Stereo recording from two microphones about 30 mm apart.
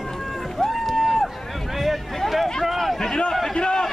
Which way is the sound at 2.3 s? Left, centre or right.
Centre.